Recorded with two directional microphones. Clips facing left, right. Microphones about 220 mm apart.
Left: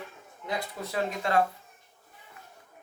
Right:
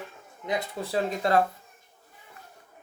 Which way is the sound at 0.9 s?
35° right (ahead or behind).